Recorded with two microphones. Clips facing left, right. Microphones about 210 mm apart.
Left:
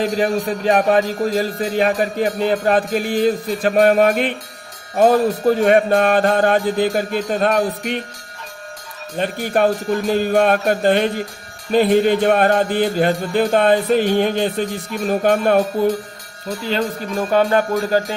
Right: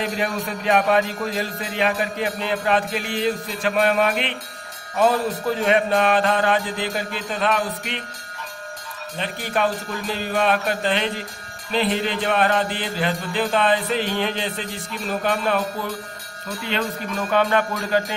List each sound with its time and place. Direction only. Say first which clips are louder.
0.0 s music: left 7 dB; 40° left (ahead or behind)
9.1 s music: left 6 dB; 50° left (ahead or behind)
16.6 s speech: left 4 dB; 35° left (ahead or behind)